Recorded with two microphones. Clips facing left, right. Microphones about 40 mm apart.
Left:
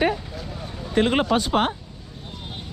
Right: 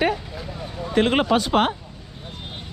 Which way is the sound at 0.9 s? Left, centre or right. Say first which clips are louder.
Right 1 dB; right.